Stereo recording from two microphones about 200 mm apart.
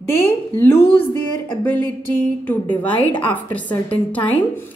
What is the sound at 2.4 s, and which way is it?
A woman's voice, 10° left (ahead or behind).